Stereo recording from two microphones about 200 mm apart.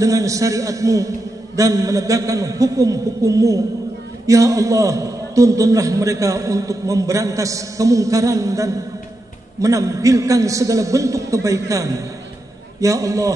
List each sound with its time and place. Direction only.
0.0 s a man's voice: 15° right (ahead or behind)